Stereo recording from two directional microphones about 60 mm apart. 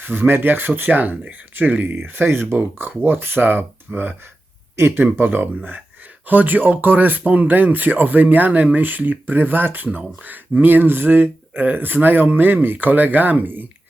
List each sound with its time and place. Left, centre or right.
0.0 s speech: right
2.6 s speech: right